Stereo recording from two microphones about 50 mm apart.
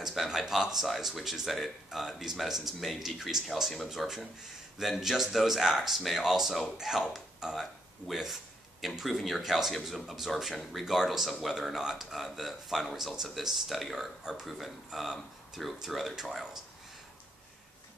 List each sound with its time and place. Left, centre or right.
0.0 s speech: centre